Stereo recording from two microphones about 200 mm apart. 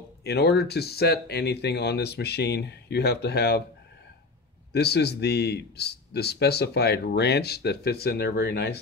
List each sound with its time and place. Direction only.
0.2 s a man's voice: 55° left (ahead or behind)
4.7 s a man's voice: 55° left (ahead or behind)